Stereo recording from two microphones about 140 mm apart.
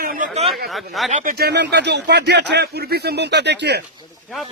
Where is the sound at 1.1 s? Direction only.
75° right (ahead or behind).